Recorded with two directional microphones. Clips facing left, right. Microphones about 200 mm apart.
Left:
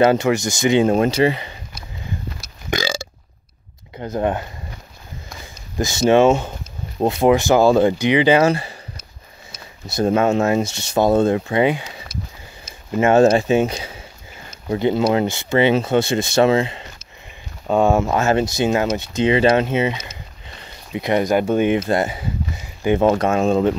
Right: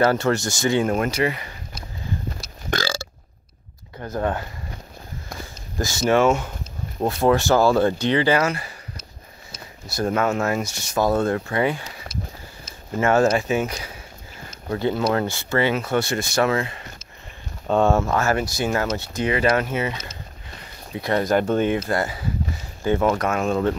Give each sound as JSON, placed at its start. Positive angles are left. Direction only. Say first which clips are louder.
{"t": 0.0, "sound": "speech", "louder": "left 4 dB", "side_deg": 20}
{"t": 2.7, "sound": "burping", "louder": "left 3 dB", "side_deg": 15}
{"t": 4.0, "sound": "speech", "louder": "left 4 dB", "side_deg": 20}
{"t": 5.8, "sound": "speech", "louder": "left 5 dB", "side_deg": 20}
{"t": 9.8, "sound": "speech", "louder": "left 5 dB", "side_deg": 25}
{"t": 12.1, "sound": "a sound", "louder": "even", "side_deg": 55}
{"t": 13.0, "sound": "speech", "louder": "left 5 dB", "side_deg": 25}
{"t": 17.6, "sound": "speech", "louder": "left 2 dB", "side_deg": 10}